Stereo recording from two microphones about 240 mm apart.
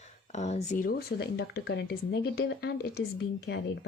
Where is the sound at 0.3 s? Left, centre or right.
Left.